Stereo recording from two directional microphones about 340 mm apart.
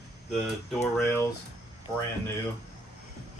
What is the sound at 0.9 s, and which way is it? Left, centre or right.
Speech, centre.